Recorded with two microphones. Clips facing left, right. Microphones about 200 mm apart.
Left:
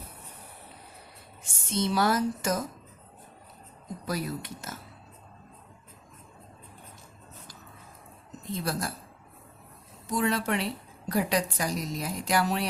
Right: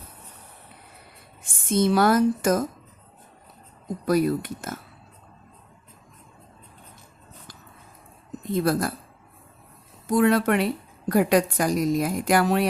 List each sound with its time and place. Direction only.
1.5 s a woman's voice: 50° right (ahead or behind)
4.0 s speech: 55° right (ahead or behind)
8.4 s speech: 55° right (ahead or behind)
10.1 s a woman's voice: 55° right (ahead or behind)